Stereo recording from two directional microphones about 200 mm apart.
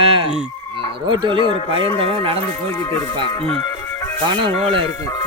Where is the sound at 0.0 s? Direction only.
30° right (ahead or behind).